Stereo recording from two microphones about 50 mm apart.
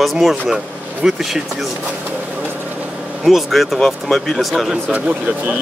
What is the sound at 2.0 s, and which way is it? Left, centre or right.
Vehicle, right.